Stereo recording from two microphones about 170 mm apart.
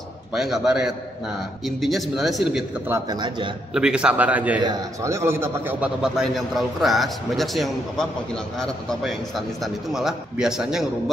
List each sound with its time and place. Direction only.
0.3 s a man's voice: 5° right (ahead or behind)
2.9 s speech: 25° right (ahead or behind)
3.7 s a man's voice: 5° right (ahead or behind)
4.6 s a man's voice: 20° right (ahead or behind); by 10.9 s centre (ahead or behind)